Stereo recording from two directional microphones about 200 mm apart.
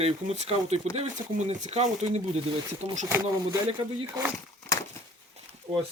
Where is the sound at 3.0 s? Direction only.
10° right (ahead or behind).